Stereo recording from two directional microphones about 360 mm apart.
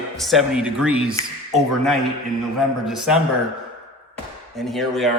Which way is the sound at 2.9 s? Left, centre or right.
Centre.